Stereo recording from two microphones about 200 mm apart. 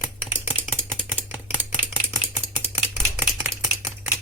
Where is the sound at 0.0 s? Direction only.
10° right (ahead or behind).